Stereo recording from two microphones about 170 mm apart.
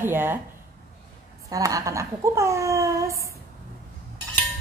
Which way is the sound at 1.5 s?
20° right (ahead or behind).